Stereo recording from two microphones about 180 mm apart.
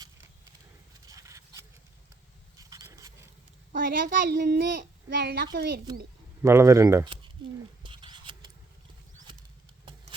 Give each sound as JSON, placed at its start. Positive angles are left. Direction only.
{"t": 1.0, "sound": "a sound", "side_deg": -20}
{"t": 3.7, "sound": "a child's voice", "side_deg": -50}
{"t": 5.0, "sound": "a woman's voice", "side_deg": -65}
{"t": 6.4, "sound": "speech", "side_deg": -15}
{"t": 7.9, "sound": "patter", "side_deg": -25}